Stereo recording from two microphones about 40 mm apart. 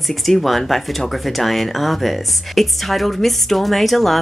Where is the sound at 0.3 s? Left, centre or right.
Centre.